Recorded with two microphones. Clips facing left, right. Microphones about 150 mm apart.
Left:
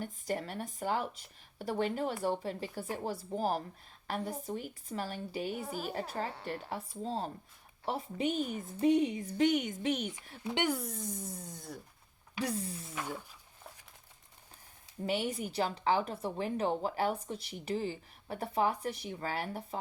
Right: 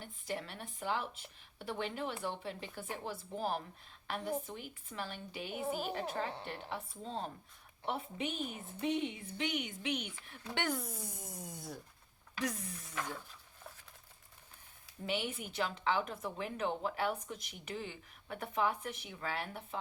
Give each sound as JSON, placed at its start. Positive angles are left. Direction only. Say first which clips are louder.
{"t": 0.0, "sound": "a woman's voice", "louder": "left 5 dB", "side_deg": 45}
{"t": 10.4, "sound": "speech", "louder": "left 5 dB", "side_deg": 15}
{"t": 10.8, "sound": "music", "louder": "left 4 dB", "side_deg": -5}
{"t": 12.4, "sound": "a woman's voice", "louder": "left 4 dB", "side_deg": 30}
{"t": 12.9, "sound": "speech", "louder": "even", "side_deg": 10}
{"t": 15.0, "sound": "a woman's voice", "louder": "left 5 dB", "side_deg": 40}